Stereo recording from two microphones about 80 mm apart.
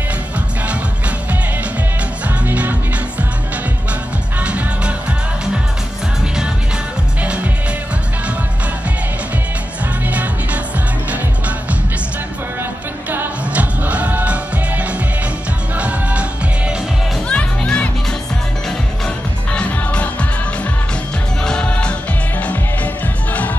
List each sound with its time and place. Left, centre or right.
2.2 s music: centre
4.4 s music: centre
13.1 s music: right
17.3 s music: centre
19.0 s music: centre
21.5 s music: centre